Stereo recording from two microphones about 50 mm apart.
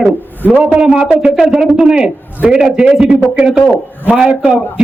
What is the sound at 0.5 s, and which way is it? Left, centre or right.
A man's voice, right.